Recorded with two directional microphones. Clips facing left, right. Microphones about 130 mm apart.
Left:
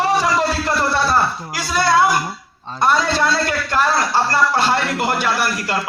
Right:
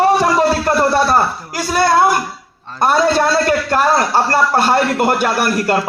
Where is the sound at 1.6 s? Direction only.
50° right (ahead or behind).